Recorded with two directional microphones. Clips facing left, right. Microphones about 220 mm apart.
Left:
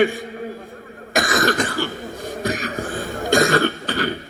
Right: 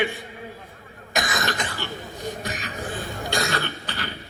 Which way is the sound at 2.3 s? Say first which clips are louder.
Left 8 dB; 45° left (ahead or behind).